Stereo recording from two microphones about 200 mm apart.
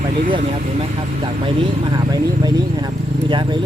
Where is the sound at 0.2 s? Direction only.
40° right (ahead or behind).